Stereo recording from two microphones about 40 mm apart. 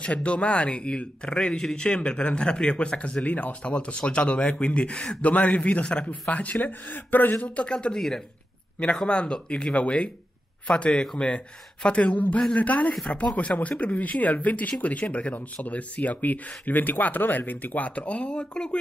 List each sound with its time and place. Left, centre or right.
0.0 s a man's voice: left
5.2 s speech: left
6.6 s speech: left
7.4 s speech: left
7.7 s a man's voice: left
9.0 s a man's voice: left